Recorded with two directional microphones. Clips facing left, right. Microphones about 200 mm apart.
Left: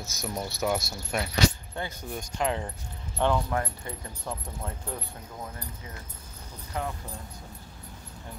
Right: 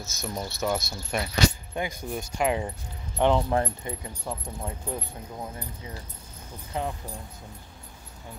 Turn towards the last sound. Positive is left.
turn(degrees=-20)  # may be behind; listen again after turning